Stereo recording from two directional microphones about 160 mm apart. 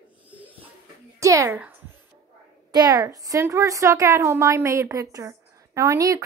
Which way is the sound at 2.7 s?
25° right (ahead or behind).